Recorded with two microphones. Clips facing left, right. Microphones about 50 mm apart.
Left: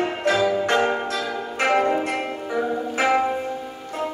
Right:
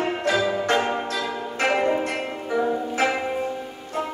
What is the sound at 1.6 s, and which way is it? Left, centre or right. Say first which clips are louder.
Music: left 2 dB; centre.